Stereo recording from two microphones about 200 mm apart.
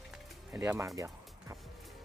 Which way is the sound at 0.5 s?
15° right (ahead or behind).